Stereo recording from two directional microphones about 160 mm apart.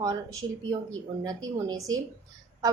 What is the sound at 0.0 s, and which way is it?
A woman's voice, 20° right (ahead or behind).